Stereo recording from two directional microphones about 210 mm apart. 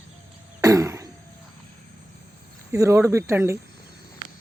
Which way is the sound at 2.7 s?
15° right (ahead or behind).